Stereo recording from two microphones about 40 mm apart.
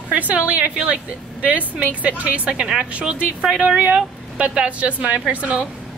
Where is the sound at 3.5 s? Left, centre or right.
Centre.